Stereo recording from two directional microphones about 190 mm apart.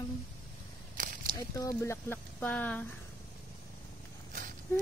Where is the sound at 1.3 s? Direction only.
15° left (ahead or behind).